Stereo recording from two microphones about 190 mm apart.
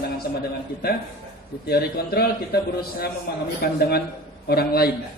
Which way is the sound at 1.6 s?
55° left (ahead or behind).